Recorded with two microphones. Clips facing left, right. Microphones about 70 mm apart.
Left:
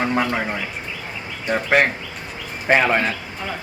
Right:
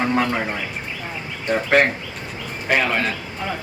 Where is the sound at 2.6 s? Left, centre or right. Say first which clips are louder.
Left 3 dB; left.